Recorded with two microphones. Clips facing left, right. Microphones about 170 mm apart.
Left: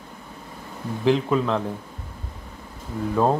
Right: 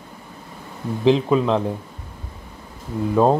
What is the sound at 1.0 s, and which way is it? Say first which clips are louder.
Speech: right 4 dB; 20° right (ahead or behind).